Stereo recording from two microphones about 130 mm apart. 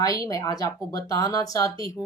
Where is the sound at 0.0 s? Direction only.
25° left (ahead or behind).